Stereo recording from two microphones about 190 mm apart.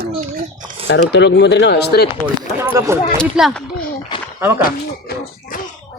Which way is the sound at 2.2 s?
10° right (ahead or behind).